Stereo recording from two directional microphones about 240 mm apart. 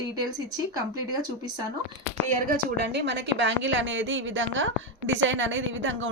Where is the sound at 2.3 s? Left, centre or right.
Right.